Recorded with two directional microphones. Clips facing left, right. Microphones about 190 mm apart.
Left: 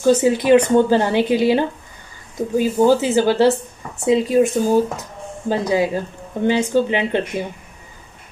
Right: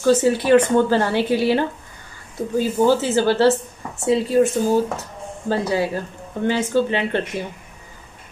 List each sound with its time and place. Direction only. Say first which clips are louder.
0.0 s speech: left 2 dB; 15° left (ahead or behind)